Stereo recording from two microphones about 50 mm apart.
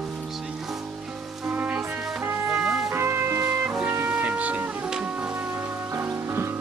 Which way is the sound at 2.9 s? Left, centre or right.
Right.